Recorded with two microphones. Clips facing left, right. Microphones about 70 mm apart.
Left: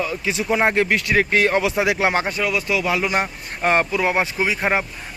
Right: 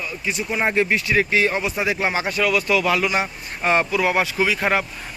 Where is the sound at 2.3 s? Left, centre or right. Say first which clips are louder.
Right 2 dB; centre.